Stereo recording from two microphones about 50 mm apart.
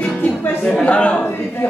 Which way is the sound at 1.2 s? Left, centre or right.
Left.